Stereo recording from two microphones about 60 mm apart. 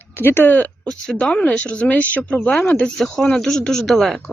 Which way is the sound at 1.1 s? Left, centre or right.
Left.